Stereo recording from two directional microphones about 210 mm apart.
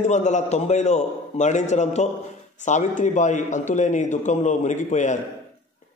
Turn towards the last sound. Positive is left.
turn(degrees=35)  # may be behind; listen again after turning